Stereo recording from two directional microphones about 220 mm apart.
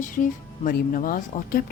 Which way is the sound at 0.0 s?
35° left (ahead or behind).